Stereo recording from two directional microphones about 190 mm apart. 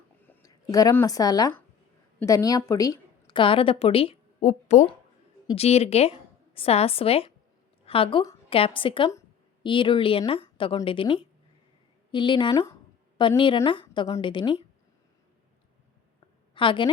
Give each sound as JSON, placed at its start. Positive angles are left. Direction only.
{"t": 0.3, "sound": "a woman's voice", "side_deg": 20}
{"t": 16.6, "sound": "a woman's voice", "side_deg": 25}